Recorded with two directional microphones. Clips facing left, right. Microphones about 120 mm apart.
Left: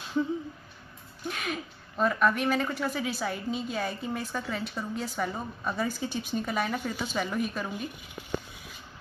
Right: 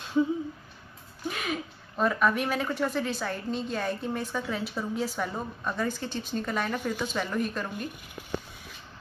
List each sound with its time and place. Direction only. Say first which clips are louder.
1.2 s speech: right 2 dB; centre (ahead or behind)